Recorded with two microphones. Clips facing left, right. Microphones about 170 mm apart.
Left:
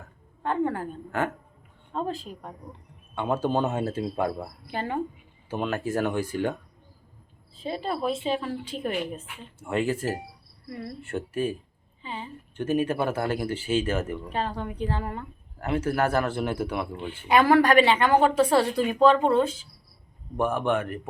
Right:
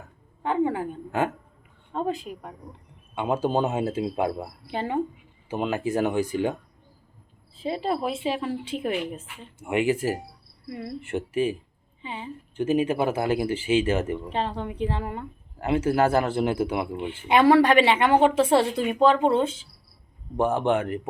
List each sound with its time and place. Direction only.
0.4 s a woman's voice: 15° right (ahead or behind)
7.6 s a man's voice: 25° right (ahead or behind)
8.0 s a woman's voice: 10° right (ahead or behind)
9.6 s a woman's voice: 15° right (ahead or behind)
13.5 s speech: 90° right
13.8 s a man's voice: 20° right (ahead or behind)